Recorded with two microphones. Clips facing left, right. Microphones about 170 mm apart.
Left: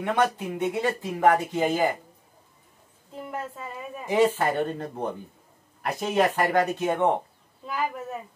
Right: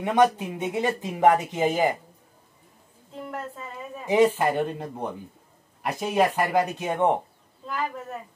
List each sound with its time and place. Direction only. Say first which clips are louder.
0.0 s speech: right 4 dB; 15° right (ahead or behind)
3.1 s a woman's voice: even; 5° left (ahead or behind)
4.4 s speech: right 1 dB; 10° right (ahead or behind)
7.6 s a woman's voice: left 1 dB; 10° left (ahead or behind)